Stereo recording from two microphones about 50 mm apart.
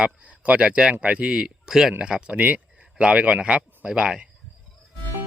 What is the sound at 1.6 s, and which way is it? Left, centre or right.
Speech, centre.